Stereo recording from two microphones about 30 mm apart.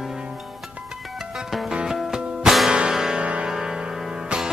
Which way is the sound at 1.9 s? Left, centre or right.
Centre.